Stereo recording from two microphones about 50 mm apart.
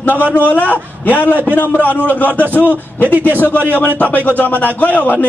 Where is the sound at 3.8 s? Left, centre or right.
Left.